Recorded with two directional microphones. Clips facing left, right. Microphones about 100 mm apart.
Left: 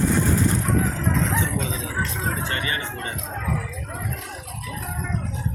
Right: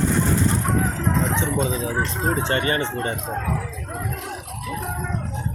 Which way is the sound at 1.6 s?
40° right (ahead or behind).